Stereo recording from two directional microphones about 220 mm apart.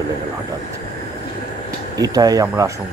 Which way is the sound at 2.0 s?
15° right (ahead or behind).